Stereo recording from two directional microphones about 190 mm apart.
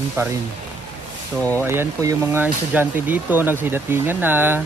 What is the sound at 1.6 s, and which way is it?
Speech, 10° right (ahead or behind).